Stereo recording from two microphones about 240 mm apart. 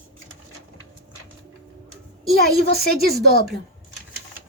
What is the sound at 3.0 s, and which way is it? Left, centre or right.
Speech, right.